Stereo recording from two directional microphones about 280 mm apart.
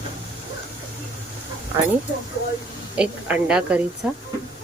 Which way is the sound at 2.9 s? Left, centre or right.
Centre.